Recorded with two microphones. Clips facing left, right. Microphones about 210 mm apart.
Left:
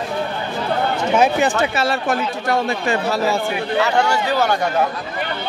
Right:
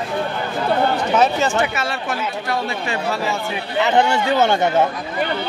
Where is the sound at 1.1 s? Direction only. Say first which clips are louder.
Left 2 dB; 15° left (ahead or behind).